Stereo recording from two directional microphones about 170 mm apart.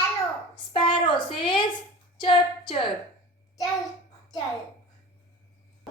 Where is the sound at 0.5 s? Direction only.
30° left (ahead or behind).